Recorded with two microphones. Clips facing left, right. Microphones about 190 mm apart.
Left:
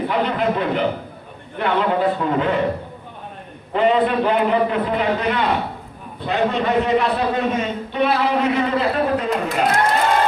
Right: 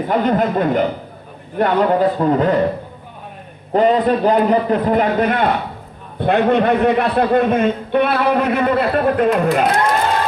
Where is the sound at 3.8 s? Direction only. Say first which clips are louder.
Right 3 dB; 40° right (ahead or behind).